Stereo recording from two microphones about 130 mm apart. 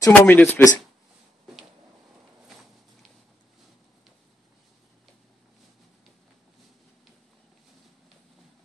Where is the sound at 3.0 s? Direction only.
Centre (ahead or behind).